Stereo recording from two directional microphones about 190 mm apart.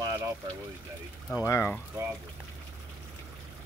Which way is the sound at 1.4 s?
10° left (ahead or behind).